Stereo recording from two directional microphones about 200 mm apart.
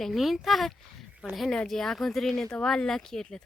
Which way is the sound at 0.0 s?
Centre (ahead or behind).